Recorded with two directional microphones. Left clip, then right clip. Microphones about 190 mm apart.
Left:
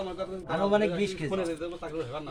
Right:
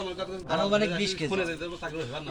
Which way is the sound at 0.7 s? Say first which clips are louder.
Even; 35° left (ahead or behind).